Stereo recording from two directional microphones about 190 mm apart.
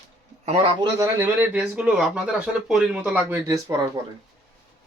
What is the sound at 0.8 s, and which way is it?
Speech, 15° right (ahead or behind).